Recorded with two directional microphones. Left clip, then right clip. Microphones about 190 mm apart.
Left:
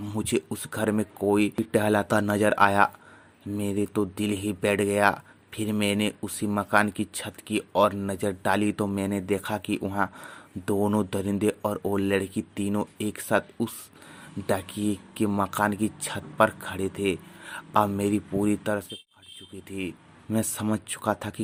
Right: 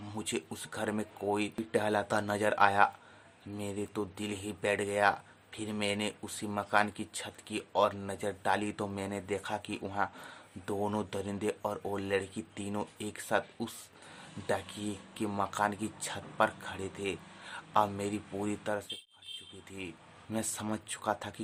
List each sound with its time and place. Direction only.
0.0 s speech: 25° left (ahead or behind)
20.3 s speech: 30° left (ahead or behind)